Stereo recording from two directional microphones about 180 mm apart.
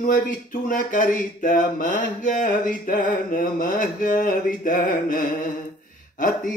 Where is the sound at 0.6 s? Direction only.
50° left (ahead or behind).